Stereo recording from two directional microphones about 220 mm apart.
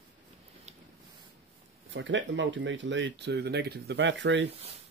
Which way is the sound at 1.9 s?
55° right (ahead or behind).